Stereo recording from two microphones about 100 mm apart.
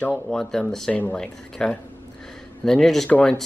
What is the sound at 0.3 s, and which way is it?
Speech, 5° left (ahead or behind).